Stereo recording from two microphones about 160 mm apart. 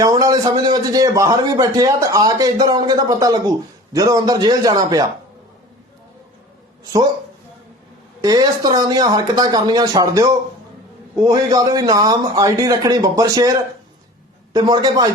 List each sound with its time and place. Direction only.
0.0 s a man's voice: 20° right (ahead or behind)
8.2 s a man's voice: 25° right (ahead or behind)